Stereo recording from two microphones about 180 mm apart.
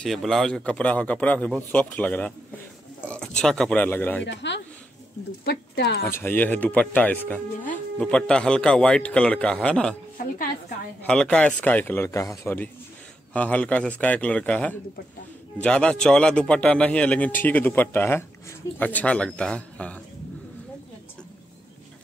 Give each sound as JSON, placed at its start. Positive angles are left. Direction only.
{"t": 0.0, "sound": "a man's voice", "side_deg": 0}
{"t": 4.2, "sound": "speech", "side_deg": 80}
{"t": 5.4, "sound": "speech", "side_deg": 70}
{"t": 6.0, "sound": "a man's voice", "side_deg": 10}
{"t": 11.1, "sound": "a man's voice", "side_deg": 5}